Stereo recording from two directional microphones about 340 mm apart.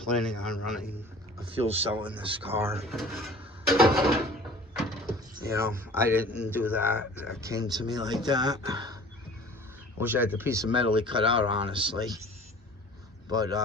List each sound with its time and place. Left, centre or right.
0.0 s a man's voice: centre
1.5 s speech: centre
2.0 s a man's voice: centre
5.5 s speech: centre
10.0 s speech: centre
13.3 s speech: centre